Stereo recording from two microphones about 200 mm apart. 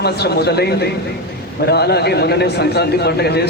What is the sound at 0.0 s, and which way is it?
A man's voice, 55° left (ahead or behind).